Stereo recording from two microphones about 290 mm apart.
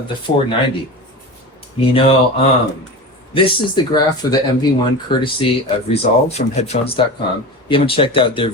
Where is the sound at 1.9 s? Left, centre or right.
Centre.